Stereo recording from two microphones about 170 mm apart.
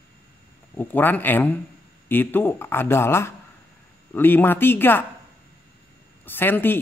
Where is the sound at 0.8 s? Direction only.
10° left (ahead or behind).